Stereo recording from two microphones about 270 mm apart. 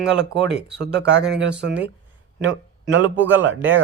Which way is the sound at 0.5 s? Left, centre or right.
Right.